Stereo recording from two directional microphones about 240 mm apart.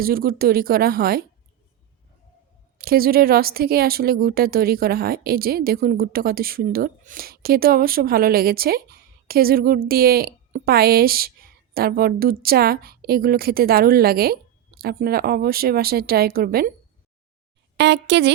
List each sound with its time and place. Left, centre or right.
0.0 s speech: right
2.7 s speech: right
17.7 s speech: right